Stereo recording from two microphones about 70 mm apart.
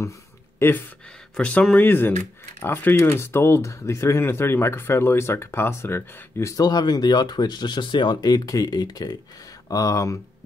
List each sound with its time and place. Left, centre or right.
0.6 s speech: left
1.3 s speech: centre
1.8 s speech: left
3.0 s speech: left
6.5 s speech: left
9.7 s speech: left